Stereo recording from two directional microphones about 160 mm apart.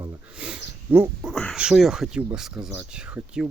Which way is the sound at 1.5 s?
5° right (ahead or behind).